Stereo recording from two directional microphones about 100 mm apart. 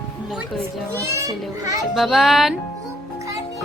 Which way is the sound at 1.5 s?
35° right (ahead or behind).